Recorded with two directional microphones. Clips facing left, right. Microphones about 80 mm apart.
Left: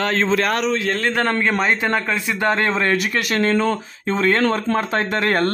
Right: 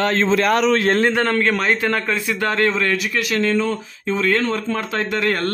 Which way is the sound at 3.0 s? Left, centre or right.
Left.